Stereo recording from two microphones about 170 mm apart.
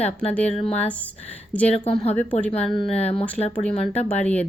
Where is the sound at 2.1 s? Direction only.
10° left (ahead or behind).